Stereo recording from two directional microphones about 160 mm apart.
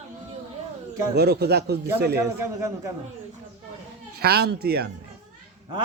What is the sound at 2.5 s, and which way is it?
Speech, 20° right (ahead or behind).